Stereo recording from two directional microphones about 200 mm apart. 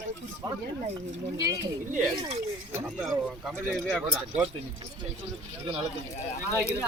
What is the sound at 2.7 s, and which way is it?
Speech, 10° right (ahead or behind).